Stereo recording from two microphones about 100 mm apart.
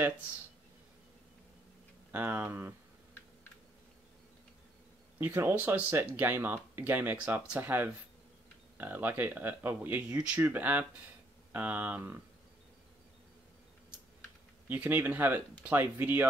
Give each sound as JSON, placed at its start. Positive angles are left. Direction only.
{"t": 2.1, "sound": "speech", "side_deg": -20}
{"t": 5.2, "sound": "speech", "side_deg": -20}
{"t": 14.7, "sound": "speech", "side_deg": -20}